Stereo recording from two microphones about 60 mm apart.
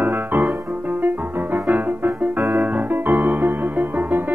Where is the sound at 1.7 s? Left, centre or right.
Right.